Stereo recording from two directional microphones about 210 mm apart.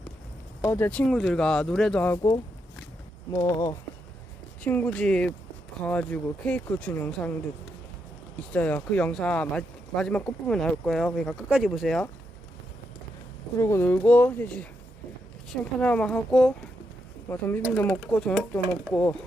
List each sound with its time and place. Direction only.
0.6 s speech: 10° left (ahead or behind)
3.3 s speech: 20° left (ahead or behind)
8.5 s speech: 5° left (ahead or behind)
13.6 s speech: 10° left (ahead or behind)